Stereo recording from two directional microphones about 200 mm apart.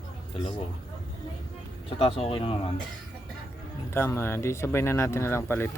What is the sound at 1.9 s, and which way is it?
Speech, 30° left (ahead or behind).